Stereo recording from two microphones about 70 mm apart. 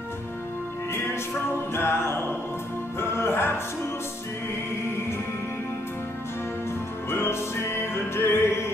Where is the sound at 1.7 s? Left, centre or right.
Left.